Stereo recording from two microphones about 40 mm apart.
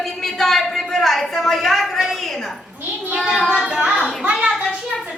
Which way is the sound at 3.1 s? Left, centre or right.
Centre.